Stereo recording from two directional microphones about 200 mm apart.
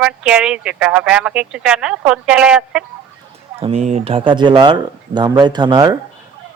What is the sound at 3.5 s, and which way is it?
Speech, 30° right (ahead or behind).